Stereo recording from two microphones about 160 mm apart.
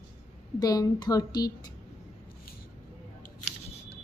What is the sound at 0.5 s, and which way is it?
A woman's voice, 25° left (ahead or behind).